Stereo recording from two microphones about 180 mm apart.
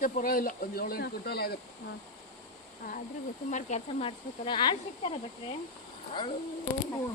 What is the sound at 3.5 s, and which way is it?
Speech, 40° left (ahead or behind).